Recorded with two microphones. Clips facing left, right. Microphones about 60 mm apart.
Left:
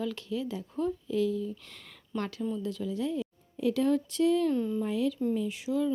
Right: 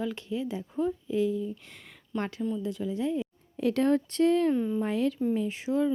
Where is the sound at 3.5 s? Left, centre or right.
Right.